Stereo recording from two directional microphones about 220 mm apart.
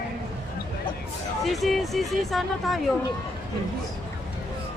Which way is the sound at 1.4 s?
Centre (ahead or behind).